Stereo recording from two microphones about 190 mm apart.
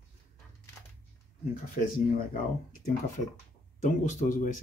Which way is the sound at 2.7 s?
45° left (ahead or behind).